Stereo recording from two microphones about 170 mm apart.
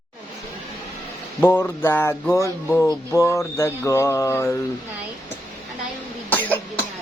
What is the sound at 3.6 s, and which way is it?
Mantra, 15° left (ahead or behind).